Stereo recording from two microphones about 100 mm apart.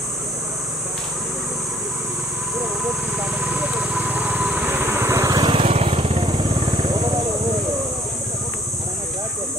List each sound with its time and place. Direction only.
3.2 s vehicle: 15° right (ahead or behind); by 5.4 s 30° right (ahead or behind)
5.4 s vehicle: 55° right (ahead or behind)
5.7 s vehicle: 75° right (ahead or behind)
6.2 s vehicle: 60° right (ahead or behind)